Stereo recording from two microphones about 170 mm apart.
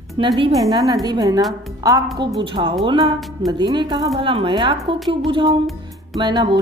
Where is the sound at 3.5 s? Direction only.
25° right (ahead or behind).